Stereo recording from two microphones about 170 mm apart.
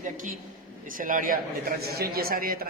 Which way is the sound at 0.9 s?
50° right (ahead or behind).